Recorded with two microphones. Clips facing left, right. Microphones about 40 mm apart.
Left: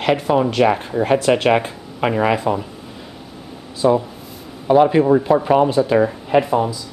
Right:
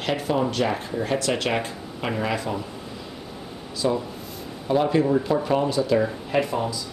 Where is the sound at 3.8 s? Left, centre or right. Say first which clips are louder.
Left 8 dB; centre.